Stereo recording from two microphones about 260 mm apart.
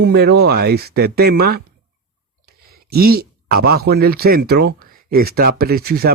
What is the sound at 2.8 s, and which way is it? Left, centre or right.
Speech, right.